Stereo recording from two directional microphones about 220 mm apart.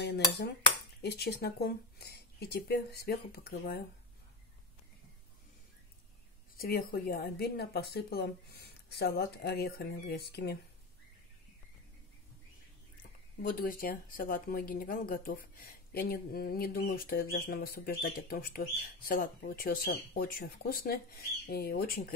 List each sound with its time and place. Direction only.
0.0 s cutlery: 50° left (ahead or behind)
1.0 s speech: 45° left (ahead or behind)
6.5 s speech: 40° left (ahead or behind)
13.4 s speech: 40° left (ahead or behind)